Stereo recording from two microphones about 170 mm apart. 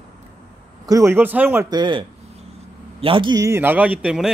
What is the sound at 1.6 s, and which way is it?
Speech, 25° right (ahead or behind).